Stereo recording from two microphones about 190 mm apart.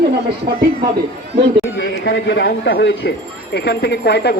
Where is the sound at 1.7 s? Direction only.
65° left (ahead or behind).